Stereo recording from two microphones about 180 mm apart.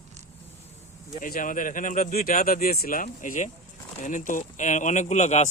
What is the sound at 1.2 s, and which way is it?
Speech, 50° left (ahead or behind).